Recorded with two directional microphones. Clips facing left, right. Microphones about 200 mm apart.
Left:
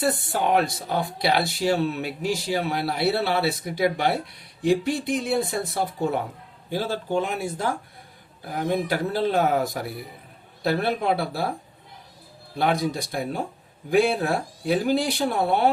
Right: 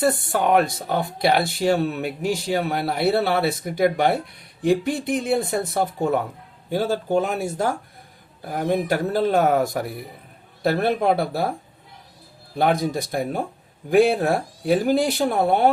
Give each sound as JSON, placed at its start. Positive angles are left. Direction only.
{"t": 0.1, "sound": "speech", "side_deg": -55}
{"t": 12.5, "sound": "speech", "side_deg": -50}